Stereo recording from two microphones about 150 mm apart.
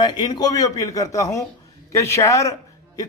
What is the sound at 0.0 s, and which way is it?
A man's voice, 25° left (ahead or behind).